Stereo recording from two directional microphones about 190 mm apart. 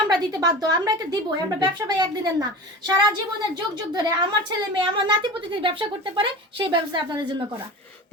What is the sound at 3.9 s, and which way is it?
A child's voice, 20° right (ahead or behind).